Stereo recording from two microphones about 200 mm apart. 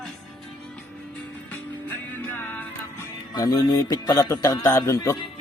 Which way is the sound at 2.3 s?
10° left (ahead or behind).